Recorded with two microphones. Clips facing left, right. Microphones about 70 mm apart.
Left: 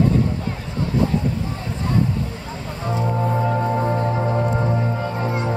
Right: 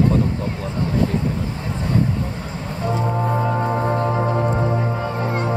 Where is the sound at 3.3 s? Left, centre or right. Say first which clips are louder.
Even; centre.